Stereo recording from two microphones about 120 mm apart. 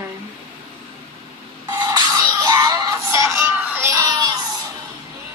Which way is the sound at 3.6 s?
15° right (ahead or behind).